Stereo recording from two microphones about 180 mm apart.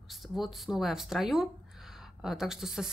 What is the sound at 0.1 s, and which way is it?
Speech, centre (ahead or behind).